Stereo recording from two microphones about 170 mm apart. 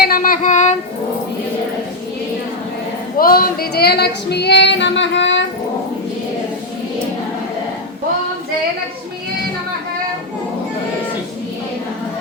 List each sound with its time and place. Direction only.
0.0 s child singing: 55° left (ahead or behind)
3.2 s female singing: 60° left (ahead or behind); by 5.5 s 90° left